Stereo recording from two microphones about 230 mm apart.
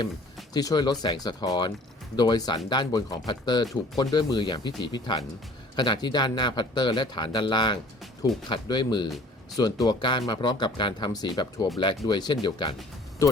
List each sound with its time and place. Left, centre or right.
0.5 s speech: centre
9.0 s a sound: centre
9.6 s speech: centre